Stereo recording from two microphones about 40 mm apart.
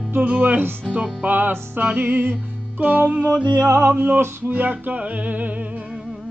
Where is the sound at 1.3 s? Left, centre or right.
Right.